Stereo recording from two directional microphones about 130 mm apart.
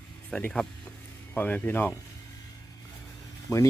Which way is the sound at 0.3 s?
5° left (ahead or behind).